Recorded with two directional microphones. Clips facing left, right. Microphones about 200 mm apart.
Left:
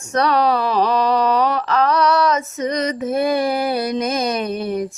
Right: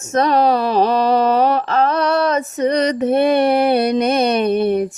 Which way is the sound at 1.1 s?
50° right (ahead or behind).